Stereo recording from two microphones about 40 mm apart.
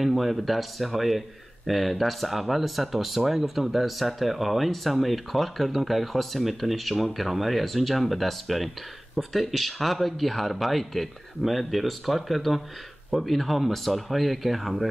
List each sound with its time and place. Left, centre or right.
0.0 s speech: centre